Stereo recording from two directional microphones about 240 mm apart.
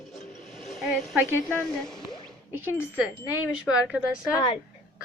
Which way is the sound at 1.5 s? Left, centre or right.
Centre.